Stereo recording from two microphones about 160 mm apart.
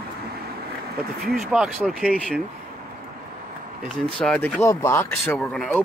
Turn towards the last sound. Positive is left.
turn(degrees=10)  # may be behind; listen again after turning